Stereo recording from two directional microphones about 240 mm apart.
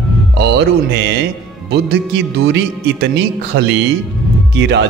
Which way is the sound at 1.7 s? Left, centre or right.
Right.